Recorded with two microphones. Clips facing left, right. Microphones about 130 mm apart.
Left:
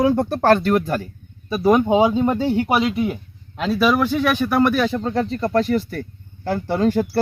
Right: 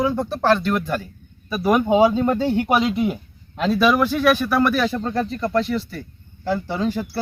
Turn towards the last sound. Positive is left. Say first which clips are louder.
# left 4 dB
turn(degrees=50)  # may be behind; listen again after turning